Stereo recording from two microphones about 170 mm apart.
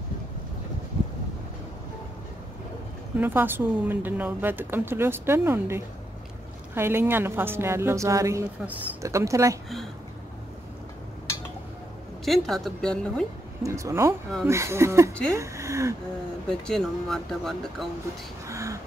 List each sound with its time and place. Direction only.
3.2 s a woman's voice: 10° right (ahead or behind)
12.3 s speech: centre (ahead or behind)
13.6 s a woman's voice: 20° right (ahead or behind)
16.4 s speech: 5° left (ahead or behind)
18.5 s a sound: 20° right (ahead or behind)